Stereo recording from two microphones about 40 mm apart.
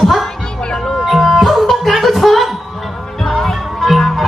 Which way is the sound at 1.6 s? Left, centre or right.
Centre.